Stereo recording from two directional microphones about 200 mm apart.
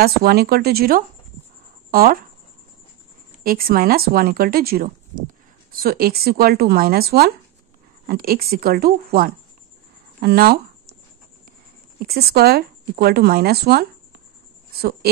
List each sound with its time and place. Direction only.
0.0 s speech: 50° right (ahead or behind)
3.4 s speech: 50° right (ahead or behind)
12.0 s speech: 50° right (ahead or behind)